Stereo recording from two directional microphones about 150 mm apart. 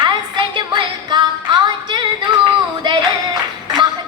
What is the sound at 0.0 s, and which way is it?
Music, 30° right (ahead or behind).